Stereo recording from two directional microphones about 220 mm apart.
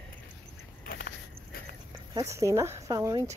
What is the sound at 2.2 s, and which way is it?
Speech, 15° right (ahead or behind).